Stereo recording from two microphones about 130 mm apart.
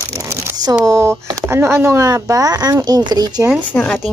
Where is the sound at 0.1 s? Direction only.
25° right (ahead or behind).